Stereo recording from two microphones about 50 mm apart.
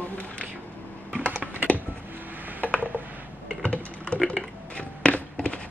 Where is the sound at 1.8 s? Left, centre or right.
Right.